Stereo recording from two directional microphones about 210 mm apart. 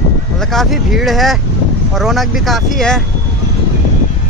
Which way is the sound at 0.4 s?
Centre (ahead or behind).